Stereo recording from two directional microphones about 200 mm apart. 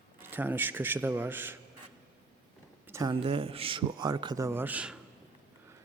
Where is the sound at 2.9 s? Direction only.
15° right (ahead or behind).